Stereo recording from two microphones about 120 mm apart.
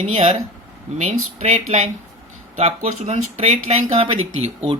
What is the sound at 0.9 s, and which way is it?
Speech, 70° right (ahead or behind).